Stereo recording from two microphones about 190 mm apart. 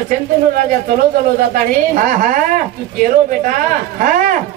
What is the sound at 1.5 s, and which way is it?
Speech, 45° right (ahead or behind).